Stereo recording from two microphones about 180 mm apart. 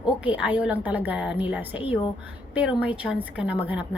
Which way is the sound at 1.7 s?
30° left (ahead or behind).